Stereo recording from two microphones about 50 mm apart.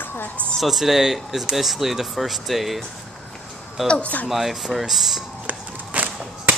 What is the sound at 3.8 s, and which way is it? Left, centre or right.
Speech, left.